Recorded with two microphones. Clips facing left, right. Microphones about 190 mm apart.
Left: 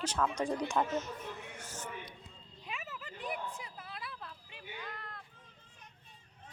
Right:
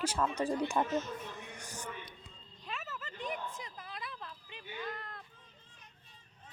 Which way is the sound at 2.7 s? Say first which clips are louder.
Right 1 dB; 10° left (ahead or behind).